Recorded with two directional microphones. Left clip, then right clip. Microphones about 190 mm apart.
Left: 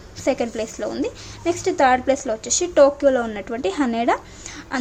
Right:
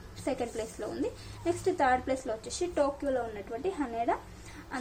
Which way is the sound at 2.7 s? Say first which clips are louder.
Left 16 dB; 30° left (ahead or behind).